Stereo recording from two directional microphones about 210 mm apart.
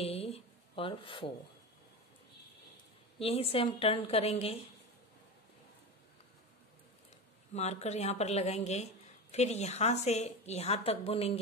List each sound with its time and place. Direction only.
0.0 s a sound: 30° left (ahead or behind)
3.2 s a woman's voice: 25° left (ahead or behind)
7.5 s a woman's voice: 30° left (ahead or behind)